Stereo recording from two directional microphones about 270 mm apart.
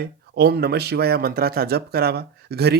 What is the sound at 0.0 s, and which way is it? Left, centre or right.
Speech, right.